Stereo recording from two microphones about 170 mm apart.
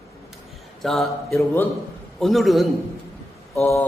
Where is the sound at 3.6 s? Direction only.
15° left (ahead or behind).